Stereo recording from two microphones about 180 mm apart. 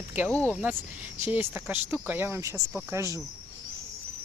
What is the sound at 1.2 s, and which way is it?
Speech, 10° right (ahead or behind).